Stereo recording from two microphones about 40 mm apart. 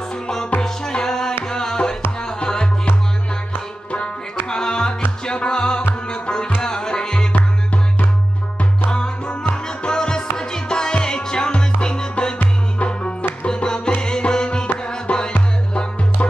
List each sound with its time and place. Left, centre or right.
0.6 s music: centre
4.5 s music: centre
6.6 s tabla: centre
7.3 s music: left
8.9 s music: left